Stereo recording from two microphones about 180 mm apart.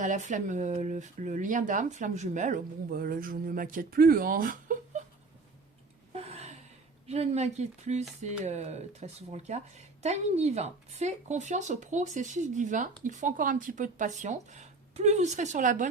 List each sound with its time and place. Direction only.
0.0 s speech: 40° right (ahead or behind)
6.1 s gasp: 35° right (ahead or behind)
7.1 s speech: 40° right (ahead or behind)